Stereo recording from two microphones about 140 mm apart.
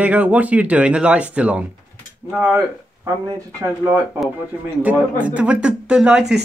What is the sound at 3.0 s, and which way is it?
Speech, 20° right (ahead or behind).